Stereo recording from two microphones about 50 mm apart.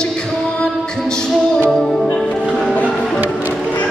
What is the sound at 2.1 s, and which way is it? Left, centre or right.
Music, centre.